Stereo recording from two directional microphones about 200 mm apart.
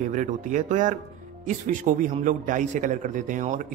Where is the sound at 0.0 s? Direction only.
40° right (ahead or behind).